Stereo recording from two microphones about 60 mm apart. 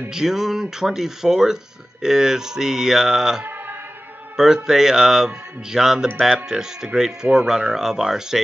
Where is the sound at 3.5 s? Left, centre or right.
Right.